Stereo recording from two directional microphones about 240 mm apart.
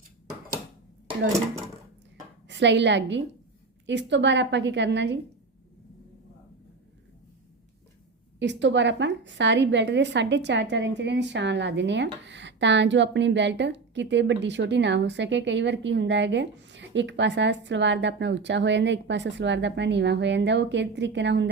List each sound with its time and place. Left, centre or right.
2.5 s a woman's voice: right
8.4 s a woman's voice: right